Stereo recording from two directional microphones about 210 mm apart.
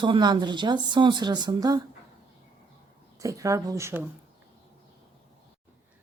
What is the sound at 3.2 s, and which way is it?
Speech, 15° right (ahead or behind).